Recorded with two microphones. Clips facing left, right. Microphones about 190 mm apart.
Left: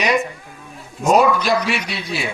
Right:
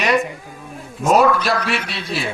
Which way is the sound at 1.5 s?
10° left (ahead or behind).